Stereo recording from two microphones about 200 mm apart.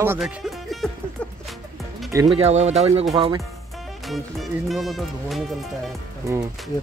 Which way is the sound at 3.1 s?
20° right (ahead or behind).